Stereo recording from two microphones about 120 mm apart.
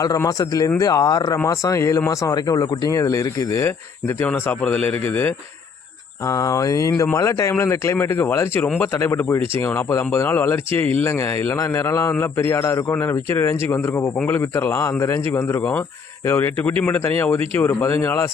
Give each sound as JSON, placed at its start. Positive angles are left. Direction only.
{"t": 0.0, "sound": "speech", "side_deg": 30}
{"t": 4.3, "sound": "speech", "side_deg": 10}
{"t": 6.2, "sound": "speech", "side_deg": 30}